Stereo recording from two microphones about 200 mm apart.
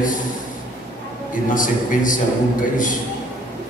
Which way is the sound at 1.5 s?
40° left (ahead or behind).